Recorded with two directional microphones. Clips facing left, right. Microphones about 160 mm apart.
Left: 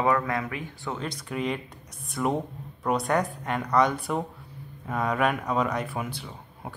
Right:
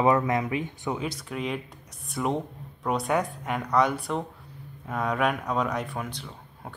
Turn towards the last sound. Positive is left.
turn(degrees=5)  # may be behind; listen again after turning